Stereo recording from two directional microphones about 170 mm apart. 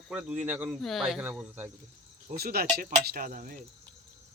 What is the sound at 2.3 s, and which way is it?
Speech, 65° right (ahead or behind).